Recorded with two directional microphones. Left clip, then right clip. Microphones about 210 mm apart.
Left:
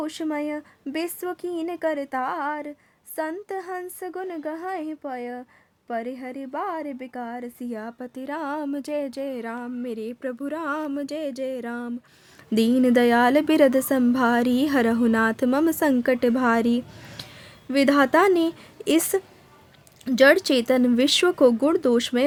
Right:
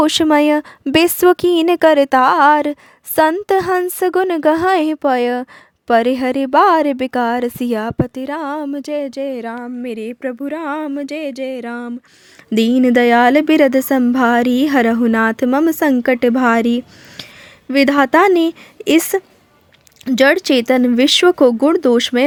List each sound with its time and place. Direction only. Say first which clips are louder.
0.0 s a woman's voice: right 16 dB; 45° right (ahead or behind); by 22.2 s 30° right (ahead or behind)